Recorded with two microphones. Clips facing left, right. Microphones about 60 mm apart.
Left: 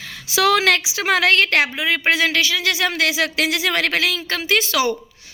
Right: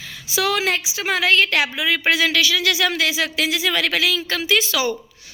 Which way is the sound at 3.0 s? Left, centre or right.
Left.